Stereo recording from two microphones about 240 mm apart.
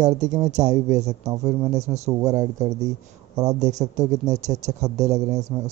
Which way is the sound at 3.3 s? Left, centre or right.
Centre.